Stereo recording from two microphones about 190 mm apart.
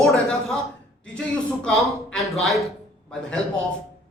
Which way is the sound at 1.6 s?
Centre (ahead or behind).